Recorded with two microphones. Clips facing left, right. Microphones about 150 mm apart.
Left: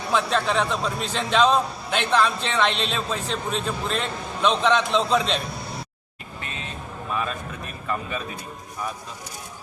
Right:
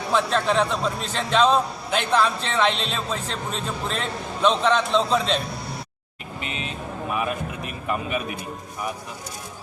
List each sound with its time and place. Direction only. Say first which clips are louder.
0.1 s a man's voice: right 1 dB; centre (ahead or behind)
6.4 s music: right 4 dB; 15° right (ahead or behind)